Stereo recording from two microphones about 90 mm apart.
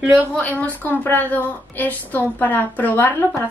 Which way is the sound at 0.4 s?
20° left (ahead or behind).